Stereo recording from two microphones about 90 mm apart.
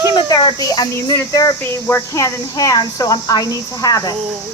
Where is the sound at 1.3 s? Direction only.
45° left (ahead or behind).